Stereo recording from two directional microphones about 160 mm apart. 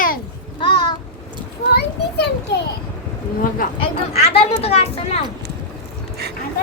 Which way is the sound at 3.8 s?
35° left (ahead or behind).